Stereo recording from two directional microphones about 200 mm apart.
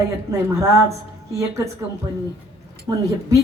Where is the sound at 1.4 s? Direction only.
15° right (ahead or behind).